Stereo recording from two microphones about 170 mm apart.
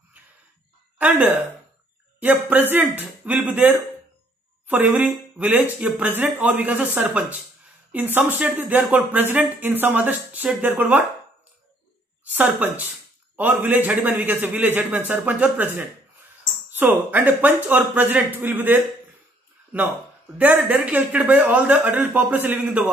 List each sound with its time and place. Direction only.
0.9 s speech: 10° right (ahead or behind)
12.3 s speech: 10° right (ahead or behind)
20.3 s speech: 10° right (ahead or behind)